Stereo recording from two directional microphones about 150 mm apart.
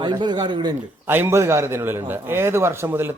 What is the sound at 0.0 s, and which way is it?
Speech, 30° right (ahead or behind).